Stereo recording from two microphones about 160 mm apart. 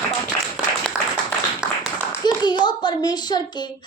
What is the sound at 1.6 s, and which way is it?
Clapping, 5° right (ahead or behind).